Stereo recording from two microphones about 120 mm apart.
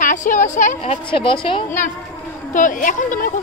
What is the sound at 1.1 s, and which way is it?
Speech, 45° left (ahead or behind).